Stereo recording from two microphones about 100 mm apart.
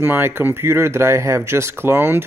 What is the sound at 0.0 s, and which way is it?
Speech, 20° right (ahead or behind).